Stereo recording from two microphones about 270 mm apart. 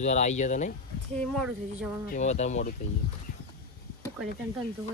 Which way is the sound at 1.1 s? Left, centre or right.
Centre.